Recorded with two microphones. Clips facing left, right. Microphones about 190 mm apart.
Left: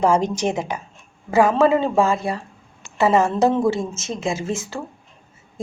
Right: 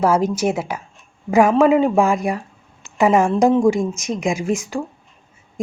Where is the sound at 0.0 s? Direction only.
5° right (ahead or behind).